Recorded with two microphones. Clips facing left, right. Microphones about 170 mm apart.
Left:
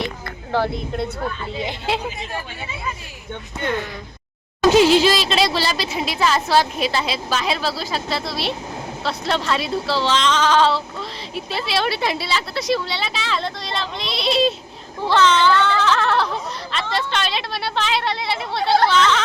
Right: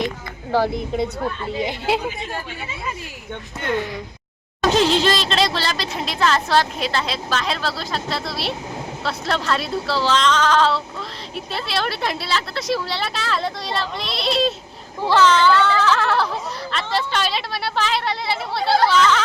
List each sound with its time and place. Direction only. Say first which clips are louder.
0.5 s a woman's voice: right 2 dB; 15° right (ahead or behind)
4.6 s speech: left 4 dB; 10° left (ahead or behind)